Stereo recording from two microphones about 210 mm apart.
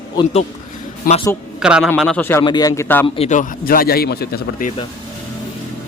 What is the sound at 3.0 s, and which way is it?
A man's voice, 30° left (ahead or behind).